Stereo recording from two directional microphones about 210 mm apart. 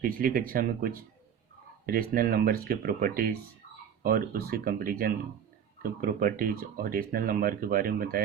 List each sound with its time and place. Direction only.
0.0 s speech: 40° right (ahead or behind)